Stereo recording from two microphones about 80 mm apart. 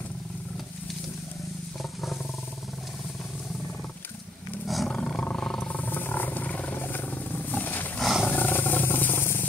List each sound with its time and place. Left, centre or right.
1.8 s wild animals: centre
4.6 s roar: centre
5.2 s wild animals: centre
5.8 s wild animals: left
8.0 s roar: centre
8.3 s wild animals: left